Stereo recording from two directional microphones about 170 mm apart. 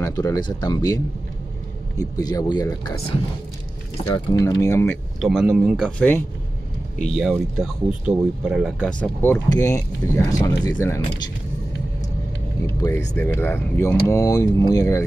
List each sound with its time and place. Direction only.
0.0 s speech: 20° left (ahead or behind)
4.1 s speech: 20° left (ahead or behind)
5.2 s speech: 5° right (ahead or behind)
7.2 s speech: 5° right (ahead or behind); by 11.0 s 20° left (ahead or behind)
12.6 s speech: 15° left (ahead or behind)